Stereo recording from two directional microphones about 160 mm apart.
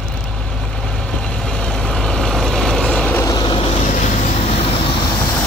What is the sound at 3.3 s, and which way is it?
Vehicle, 25° left (ahead or behind).